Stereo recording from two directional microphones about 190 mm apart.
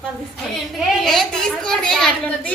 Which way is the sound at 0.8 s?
Centre (ahead or behind).